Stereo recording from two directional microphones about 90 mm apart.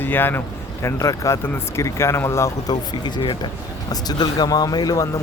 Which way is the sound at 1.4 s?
25° left (ahead or behind).